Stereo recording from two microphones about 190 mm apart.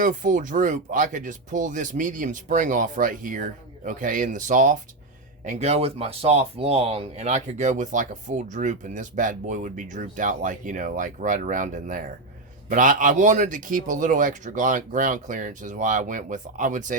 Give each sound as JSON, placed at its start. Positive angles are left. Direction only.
{"t": 0.0, "sound": "speech", "side_deg": -45}